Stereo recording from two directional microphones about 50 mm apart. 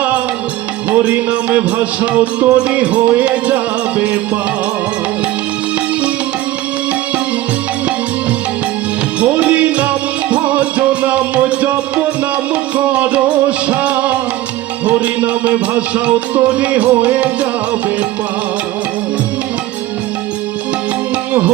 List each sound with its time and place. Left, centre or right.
0.9 s music: right
9.2 s music: right
12.7 s music: right